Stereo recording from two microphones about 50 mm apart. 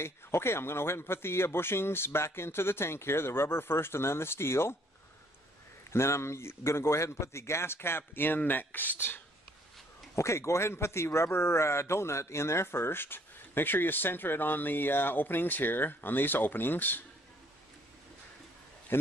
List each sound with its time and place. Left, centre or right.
0.0 s speech: left
5.9 s speech: left
10.1 s a man's voice: left
10.7 s a man's voice: left